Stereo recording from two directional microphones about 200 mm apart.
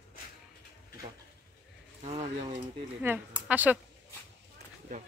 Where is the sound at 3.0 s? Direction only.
10° right (ahead or behind).